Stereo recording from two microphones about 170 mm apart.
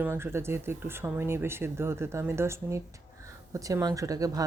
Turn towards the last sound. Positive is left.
turn(degrees=-20)  # may be behind; listen again after turning